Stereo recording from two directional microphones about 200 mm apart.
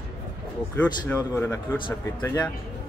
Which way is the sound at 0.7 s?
10° left (ahead or behind).